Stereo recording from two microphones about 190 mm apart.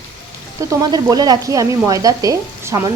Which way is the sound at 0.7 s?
20° right (ahead or behind).